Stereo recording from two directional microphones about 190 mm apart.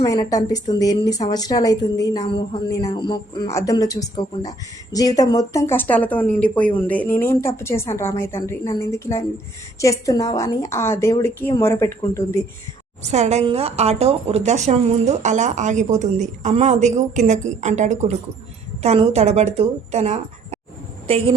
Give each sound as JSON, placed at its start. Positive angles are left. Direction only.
{"t": 0.0, "sound": "a woman's voice", "side_deg": 20}
{"t": 13.1, "sound": "a woman's voice", "side_deg": -35}